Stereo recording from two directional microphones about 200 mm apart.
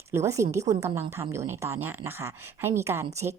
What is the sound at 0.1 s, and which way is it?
A woman's voice, 15° right (ahead or behind).